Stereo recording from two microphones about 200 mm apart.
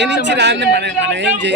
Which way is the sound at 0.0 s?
60° right (ahead or behind).